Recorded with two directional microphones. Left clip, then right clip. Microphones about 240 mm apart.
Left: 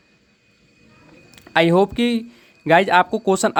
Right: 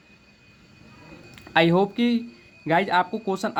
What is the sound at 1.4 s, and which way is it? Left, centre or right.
Speech, left.